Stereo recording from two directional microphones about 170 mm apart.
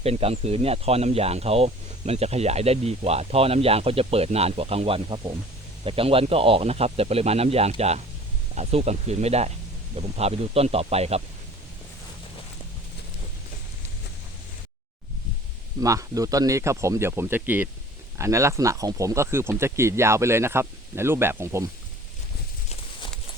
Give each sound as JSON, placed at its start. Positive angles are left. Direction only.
{"t": 0.0, "sound": "speech", "side_deg": -35}
{"t": 15.8, "sound": "speech", "side_deg": -20}